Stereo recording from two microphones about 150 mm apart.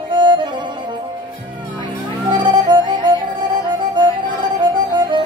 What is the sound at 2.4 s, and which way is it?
Music, 30° right (ahead or behind).